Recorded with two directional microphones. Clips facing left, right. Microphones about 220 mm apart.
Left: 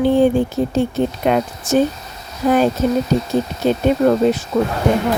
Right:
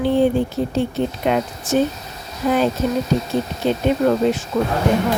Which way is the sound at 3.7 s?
40° left (ahead or behind).